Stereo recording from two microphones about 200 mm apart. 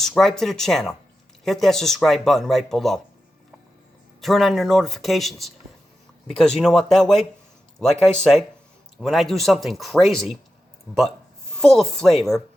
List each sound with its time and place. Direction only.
0.0 s speech: centre (ahead or behind)
4.2 s speech: centre (ahead or behind)
11.5 s speech: centre (ahead or behind)